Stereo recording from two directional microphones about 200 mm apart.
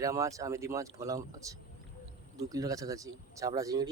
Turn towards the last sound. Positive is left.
turn(degrees=-15)  # may be behind; listen again after turning